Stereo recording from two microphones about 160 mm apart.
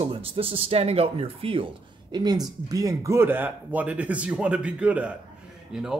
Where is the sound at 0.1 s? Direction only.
35° right (ahead or behind).